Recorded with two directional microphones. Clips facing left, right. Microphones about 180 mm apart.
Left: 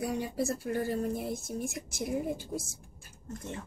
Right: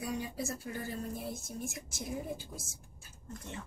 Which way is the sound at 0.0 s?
65° left (ahead or behind).